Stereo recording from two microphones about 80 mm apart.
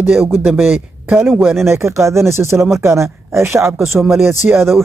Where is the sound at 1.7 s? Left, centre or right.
Right.